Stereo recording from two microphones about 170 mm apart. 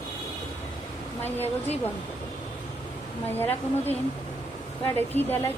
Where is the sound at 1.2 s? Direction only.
10° left (ahead or behind).